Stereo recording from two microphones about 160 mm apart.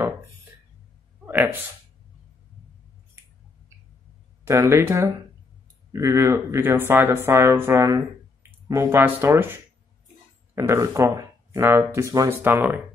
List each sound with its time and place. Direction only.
1.2 s speech: 15° right (ahead or behind)
4.5 s speech: 15° right (ahead or behind)